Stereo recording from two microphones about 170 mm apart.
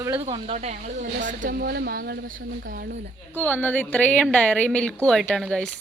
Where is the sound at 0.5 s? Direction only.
45° right (ahead or behind).